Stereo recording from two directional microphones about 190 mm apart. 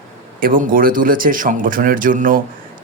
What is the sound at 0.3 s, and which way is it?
A man's voice, 45° right (ahead or behind).